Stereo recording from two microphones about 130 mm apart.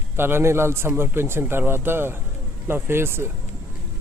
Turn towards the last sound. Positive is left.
turn(degrees=-20)  # may be behind; listen again after turning